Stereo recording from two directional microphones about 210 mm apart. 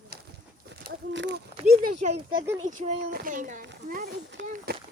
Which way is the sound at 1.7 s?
40° right (ahead or behind).